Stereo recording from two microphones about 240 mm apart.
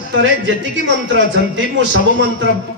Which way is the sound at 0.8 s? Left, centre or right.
Right.